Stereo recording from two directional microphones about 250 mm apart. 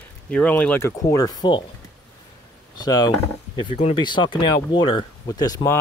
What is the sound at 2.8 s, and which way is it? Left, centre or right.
Speech, centre.